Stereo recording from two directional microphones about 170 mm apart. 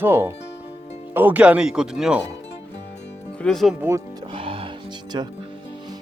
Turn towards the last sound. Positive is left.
turn(degrees=-25)  # may be behind; listen again after turning